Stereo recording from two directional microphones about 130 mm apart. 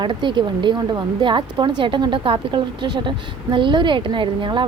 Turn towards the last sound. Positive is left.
turn(degrees=-40)  # may be behind; listen again after turning